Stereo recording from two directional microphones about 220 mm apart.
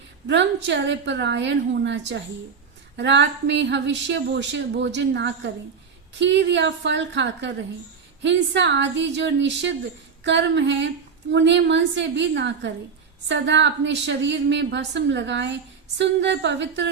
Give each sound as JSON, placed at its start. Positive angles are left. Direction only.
{"t": 0.3, "sound": "speech", "side_deg": -55}
{"t": 10.2, "sound": "female singing", "side_deg": -55}
{"t": 11.3, "sound": "speech", "side_deg": -55}